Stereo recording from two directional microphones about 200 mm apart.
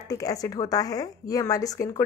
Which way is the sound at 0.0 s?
15° left (ahead or behind).